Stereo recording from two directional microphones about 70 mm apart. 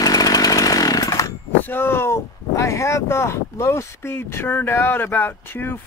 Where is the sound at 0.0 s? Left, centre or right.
Left.